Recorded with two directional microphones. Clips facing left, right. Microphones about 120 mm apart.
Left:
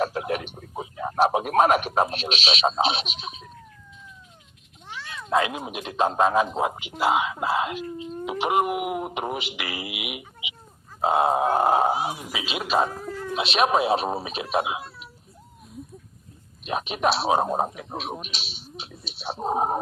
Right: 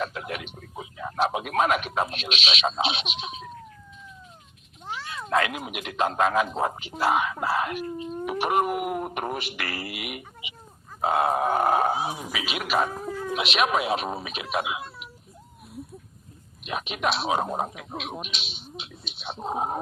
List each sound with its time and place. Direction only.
0.0 s a sound: 35° left (ahead or behind)
5.3 s speech: 20° left (ahead or behind)
6.5 s speech: 15° left (ahead or behind)
12.3 s speech: 25° left (ahead or behind)
13.1 s cat: 15° right (ahead or behind)
13.3 s speech: 30° left (ahead or behind)
16.6 s speech: 35° left (ahead or behind)